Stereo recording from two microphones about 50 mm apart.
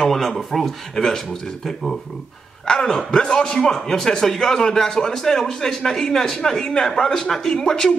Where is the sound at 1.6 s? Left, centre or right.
Centre.